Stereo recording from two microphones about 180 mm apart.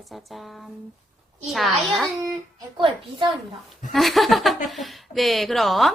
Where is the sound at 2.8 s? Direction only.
30° right (ahead or behind).